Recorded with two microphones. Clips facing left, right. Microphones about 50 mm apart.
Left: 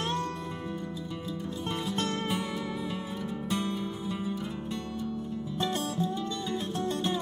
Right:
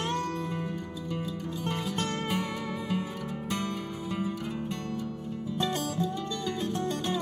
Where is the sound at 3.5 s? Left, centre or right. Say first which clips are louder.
Left 2 dB; right.